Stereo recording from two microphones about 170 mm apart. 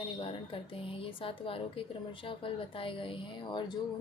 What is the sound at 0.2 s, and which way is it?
A woman's voice, 30° left (ahead or behind).